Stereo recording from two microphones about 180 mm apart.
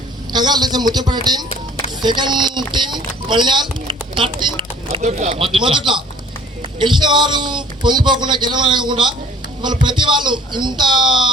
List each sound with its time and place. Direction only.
0.3 s a man's voice: 25° right (ahead or behind)
5.0 s speech: 40° right (ahead or behind)
5.4 s a man's voice: 30° right (ahead or behind)